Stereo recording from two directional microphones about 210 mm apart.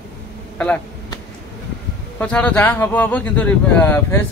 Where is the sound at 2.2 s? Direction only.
5° left (ahead or behind).